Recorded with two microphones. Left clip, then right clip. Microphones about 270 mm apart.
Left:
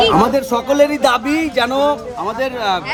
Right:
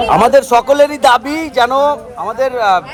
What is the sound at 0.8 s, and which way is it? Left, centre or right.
Speech, centre.